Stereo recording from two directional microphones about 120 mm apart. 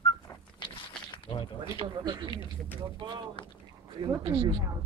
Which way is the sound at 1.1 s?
45° left (ahead or behind).